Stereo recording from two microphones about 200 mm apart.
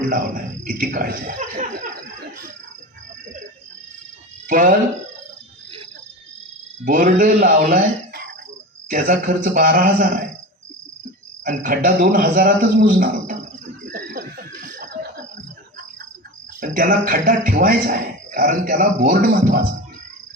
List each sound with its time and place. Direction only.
0.1 s a man's voice: 45° right (ahead or behind)
4.4 s speech: 40° right (ahead or behind)
6.8 s a man's voice: 45° right (ahead or behind)
11.4 s a man's voice: 40° right (ahead or behind)
13.9 s a sound: 45° right (ahead or behind)
16.6 s a man's voice: 45° right (ahead or behind)